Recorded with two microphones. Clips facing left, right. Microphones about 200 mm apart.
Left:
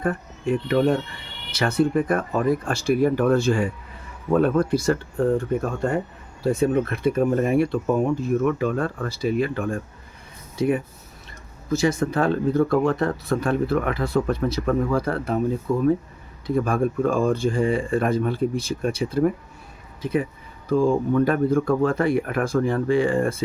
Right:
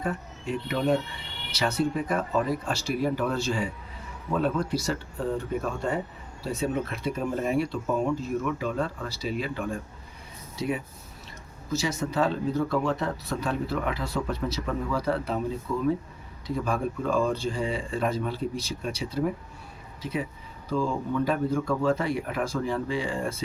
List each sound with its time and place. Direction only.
0.0 s speech: 55° left (ahead or behind)